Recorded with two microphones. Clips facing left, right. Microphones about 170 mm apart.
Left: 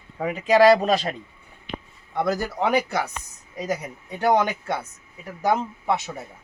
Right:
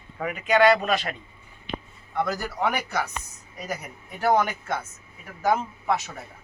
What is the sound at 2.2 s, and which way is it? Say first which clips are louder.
A man's voice: left 7 dB; 20° left (ahead or behind).